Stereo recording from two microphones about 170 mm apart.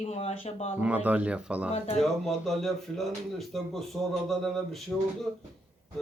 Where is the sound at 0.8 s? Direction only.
10° right (ahead or behind).